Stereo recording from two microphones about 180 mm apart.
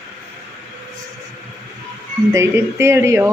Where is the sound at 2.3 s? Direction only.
15° right (ahead or behind).